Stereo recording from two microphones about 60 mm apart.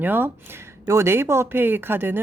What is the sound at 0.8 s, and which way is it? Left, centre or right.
Speech, right.